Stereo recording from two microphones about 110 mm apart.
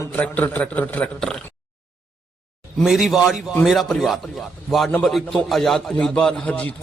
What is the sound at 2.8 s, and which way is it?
A man's voice, 5° right (ahead or behind).